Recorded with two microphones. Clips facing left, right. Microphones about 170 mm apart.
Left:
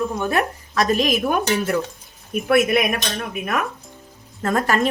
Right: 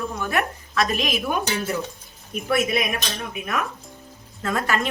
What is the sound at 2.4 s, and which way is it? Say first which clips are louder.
Speech: left 5 dB; 55° left (ahead or behind).